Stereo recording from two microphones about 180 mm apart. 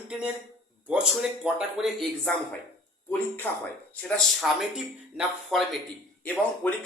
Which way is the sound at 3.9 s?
Centre (ahead or behind).